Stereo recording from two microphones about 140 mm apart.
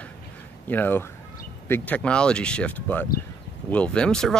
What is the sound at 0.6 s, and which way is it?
Speech, 15° left (ahead or behind).